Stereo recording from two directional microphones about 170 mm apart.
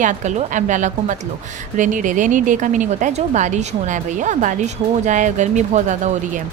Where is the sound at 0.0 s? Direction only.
45° right (ahead or behind).